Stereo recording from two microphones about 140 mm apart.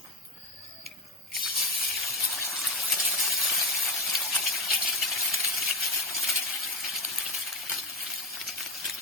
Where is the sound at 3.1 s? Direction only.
Centre (ahead or behind).